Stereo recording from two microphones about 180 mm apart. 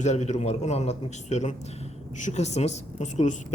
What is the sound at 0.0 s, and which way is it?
Speech, 40° left (ahead or behind).